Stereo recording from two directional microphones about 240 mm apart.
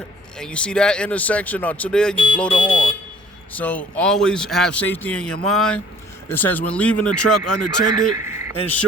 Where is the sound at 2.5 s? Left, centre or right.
Centre.